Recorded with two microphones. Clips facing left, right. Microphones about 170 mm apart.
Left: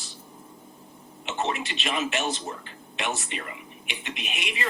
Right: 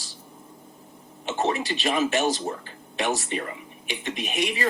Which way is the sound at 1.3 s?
40° right (ahead or behind).